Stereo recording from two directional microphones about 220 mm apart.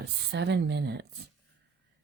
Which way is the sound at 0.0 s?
50° right (ahead or behind).